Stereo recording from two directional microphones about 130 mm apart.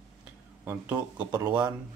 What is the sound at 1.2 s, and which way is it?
Speech, 25° right (ahead or behind).